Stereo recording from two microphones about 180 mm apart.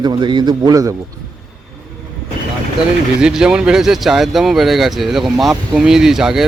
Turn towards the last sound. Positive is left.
turn(degrees=0)  # may be behind; listen again after turning